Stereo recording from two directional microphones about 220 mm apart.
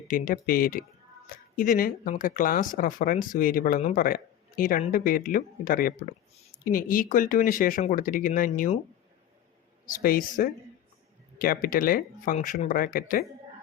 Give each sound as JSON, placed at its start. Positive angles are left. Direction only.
{"t": 0.1, "sound": "speech", "side_deg": 40}
{"t": 9.8, "sound": "speech", "side_deg": 40}